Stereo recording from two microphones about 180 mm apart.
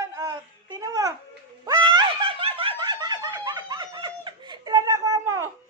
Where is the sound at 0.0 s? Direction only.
20° right (ahead or behind).